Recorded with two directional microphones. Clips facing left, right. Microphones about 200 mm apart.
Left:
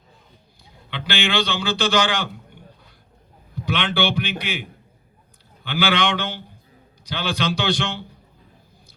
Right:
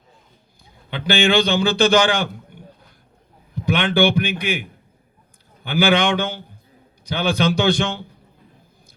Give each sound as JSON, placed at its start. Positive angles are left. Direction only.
{"t": 1.1, "sound": "speech", "side_deg": -50}
{"t": 3.7, "sound": "speech", "side_deg": -50}
{"t": 5.6, "sound": "speech", "side_deg": -50}